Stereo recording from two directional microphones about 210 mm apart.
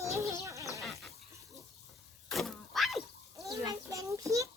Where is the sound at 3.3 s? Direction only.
15° right (ahead or behind).